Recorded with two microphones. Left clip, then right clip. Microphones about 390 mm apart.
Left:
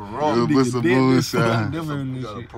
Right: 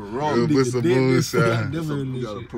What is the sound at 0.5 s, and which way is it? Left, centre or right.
Speech, centre.